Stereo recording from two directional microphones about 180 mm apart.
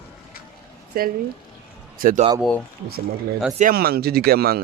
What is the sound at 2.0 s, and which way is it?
Speech, 50° right (ahead or behind).